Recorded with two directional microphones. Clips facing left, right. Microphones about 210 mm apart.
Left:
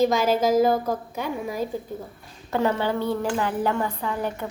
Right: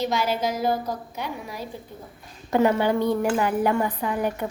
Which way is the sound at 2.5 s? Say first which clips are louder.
Right 3 dB; 15° right (ahead or behind).